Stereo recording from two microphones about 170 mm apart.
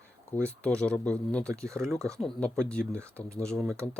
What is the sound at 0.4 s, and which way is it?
Speech, 5° left (ahead or behind).